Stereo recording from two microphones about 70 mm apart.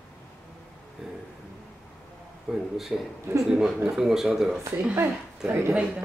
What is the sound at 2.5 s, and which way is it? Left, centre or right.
Speech, centre.